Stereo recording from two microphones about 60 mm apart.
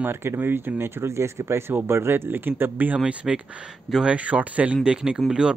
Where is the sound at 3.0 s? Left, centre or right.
Centre.